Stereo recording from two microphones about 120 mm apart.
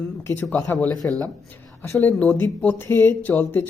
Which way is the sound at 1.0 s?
15° left (ahead or behind).